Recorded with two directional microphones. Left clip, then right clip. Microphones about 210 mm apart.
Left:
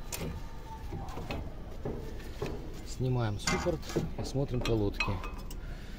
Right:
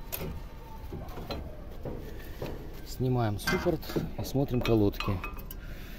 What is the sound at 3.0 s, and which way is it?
Speech, 45° right (ahead or behind).